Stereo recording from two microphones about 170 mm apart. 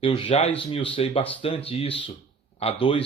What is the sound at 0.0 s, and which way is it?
Speech, 30° left (ahead or behind).